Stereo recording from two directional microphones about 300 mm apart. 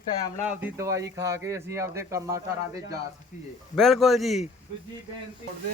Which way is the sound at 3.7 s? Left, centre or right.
Centre.